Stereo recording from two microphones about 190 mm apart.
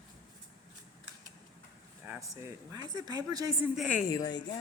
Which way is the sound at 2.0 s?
15° right (ahead or behind).